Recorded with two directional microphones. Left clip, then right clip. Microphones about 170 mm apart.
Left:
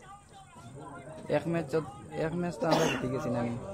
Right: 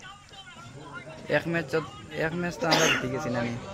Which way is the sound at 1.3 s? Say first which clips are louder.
Right 4 dB; 5° right (ahead or behind).